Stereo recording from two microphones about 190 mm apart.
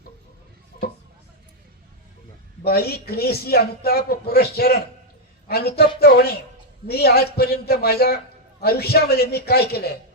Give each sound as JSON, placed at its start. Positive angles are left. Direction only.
{"t": 2.6, "sound": "a man's voice", "side_deg": 55}